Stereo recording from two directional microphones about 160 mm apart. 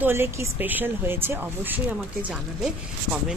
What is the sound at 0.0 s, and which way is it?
A woman's voice, 15° right (ahead or behind).